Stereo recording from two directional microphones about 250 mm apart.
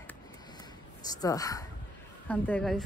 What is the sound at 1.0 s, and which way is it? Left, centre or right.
A woman's voice, centre.